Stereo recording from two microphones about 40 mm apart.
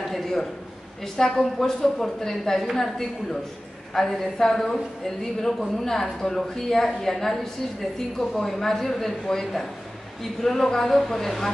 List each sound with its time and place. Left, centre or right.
0.1 s a sound: centre
1.0 s speech: centre
8.4 s speech: centre